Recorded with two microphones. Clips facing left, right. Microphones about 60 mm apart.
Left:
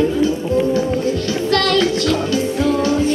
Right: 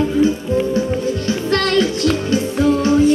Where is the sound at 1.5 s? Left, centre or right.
Right.